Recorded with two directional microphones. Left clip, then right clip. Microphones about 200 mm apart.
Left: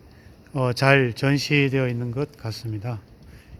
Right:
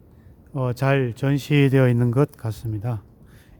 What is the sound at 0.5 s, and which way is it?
Speech, 5° right (ahead or behind).